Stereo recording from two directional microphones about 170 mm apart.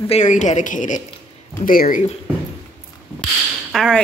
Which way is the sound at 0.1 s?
45° left (ahead or behind).